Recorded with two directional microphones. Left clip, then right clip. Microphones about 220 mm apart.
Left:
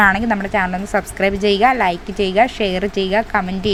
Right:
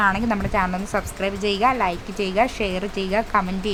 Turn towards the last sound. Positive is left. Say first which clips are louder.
# left 3 dB
turn(degrees=10)  # may be behind; listen again after turning